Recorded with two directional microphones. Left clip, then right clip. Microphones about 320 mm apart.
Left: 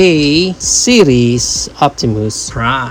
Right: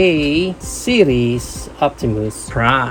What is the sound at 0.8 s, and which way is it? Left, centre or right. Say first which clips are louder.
Speech: left 5 dB; left.